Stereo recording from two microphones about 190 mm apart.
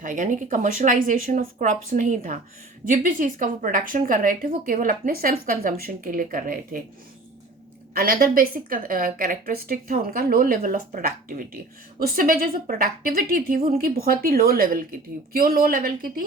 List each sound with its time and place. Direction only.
0.0 s a woman's voice: 40° right (ahead or behind)
7.9 s a woman's voice: 50° right (ahead or behind)